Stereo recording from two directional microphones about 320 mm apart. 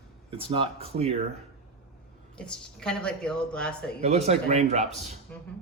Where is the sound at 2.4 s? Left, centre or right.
Centre.